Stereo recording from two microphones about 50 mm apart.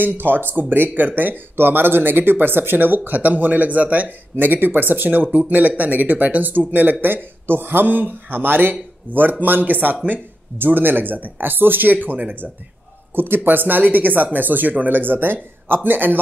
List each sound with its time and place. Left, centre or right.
0.0 s speech: right